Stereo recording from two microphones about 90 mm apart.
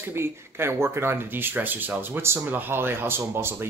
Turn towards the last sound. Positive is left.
turn(degrees=-25)  # may be behind; listen again after turning